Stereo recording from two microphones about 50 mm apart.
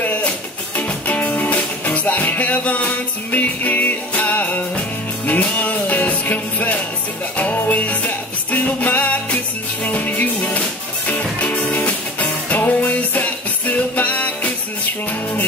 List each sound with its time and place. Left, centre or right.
0.0 s music: left